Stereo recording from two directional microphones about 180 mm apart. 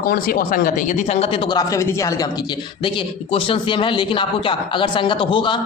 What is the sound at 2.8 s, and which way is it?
Speech, 30° left (ahead or behind).